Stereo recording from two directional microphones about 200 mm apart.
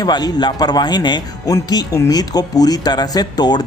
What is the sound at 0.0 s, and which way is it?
Speech, 20° left (ahead or behind).